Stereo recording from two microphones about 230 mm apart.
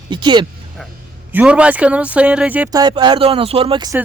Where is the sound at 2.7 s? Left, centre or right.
Centre.